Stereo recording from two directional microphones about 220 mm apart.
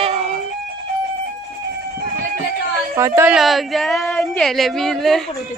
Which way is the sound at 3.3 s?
Centre (ahead or behind).